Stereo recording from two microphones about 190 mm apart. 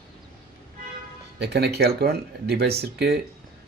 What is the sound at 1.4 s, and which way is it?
A man's voice, 60° right (ahead or behind).